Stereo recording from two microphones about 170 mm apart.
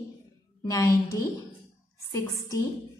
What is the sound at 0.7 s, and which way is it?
Speech, 20° left (ahead or behind).